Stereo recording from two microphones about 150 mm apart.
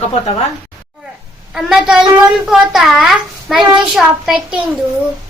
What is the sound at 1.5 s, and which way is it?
A child's voice, 5° right (ahead or behind).